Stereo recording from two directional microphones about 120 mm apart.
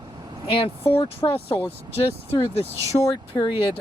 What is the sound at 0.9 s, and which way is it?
Speech, 50° left (ahead or behind).